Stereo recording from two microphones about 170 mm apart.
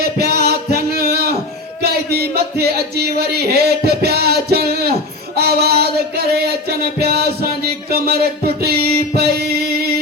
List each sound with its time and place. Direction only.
0.0 s music: 70° right (ahead or behind)
5.4 s child singing: 65° right (ahead or behind)
6.7 s a sound: 65° right (ahead or behind)
8.6 s music: 65° right (ahead or behind)